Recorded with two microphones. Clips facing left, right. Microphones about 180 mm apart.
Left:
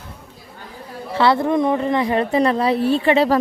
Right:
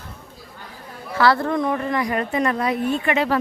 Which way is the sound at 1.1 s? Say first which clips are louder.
Left 2 dB; 25° left (ahead or behind).